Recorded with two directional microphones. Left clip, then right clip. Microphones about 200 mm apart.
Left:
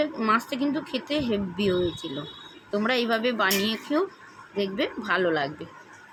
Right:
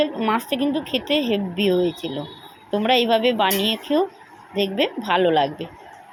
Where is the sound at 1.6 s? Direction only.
10° right (ahead or behind).